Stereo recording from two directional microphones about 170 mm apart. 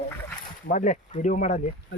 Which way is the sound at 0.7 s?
45° left (ahead or behind).